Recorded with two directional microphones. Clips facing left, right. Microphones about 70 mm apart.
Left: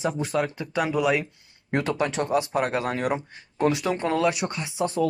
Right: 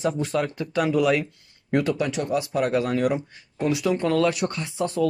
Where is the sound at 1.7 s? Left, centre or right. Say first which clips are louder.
Right 2 dB; left.